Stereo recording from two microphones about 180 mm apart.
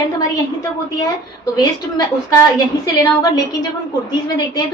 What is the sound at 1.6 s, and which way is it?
A woman's voice, 20° left (ahead or behind).